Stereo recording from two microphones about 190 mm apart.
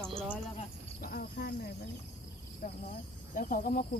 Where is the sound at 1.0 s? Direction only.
55° left (ahead or behind).